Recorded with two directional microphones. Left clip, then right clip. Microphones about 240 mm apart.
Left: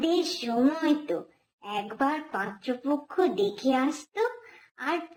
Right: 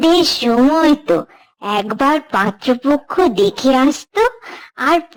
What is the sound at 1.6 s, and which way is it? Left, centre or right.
A child's voice, right.